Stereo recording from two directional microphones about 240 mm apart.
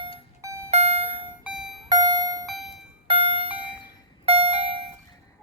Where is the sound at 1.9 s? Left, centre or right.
Centre.